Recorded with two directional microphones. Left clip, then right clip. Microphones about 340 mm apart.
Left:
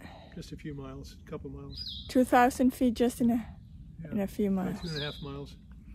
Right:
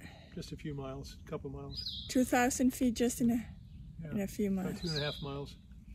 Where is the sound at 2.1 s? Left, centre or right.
Centre.